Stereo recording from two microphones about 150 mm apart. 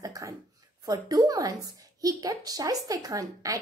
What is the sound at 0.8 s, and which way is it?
A woman's voice, 25° right (ahead or behind).